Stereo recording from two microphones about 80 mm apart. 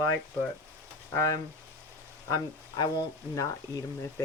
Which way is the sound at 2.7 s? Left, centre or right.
Left.